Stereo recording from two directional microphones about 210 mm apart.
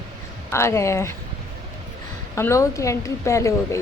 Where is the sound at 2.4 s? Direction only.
15° left (ahead or behind).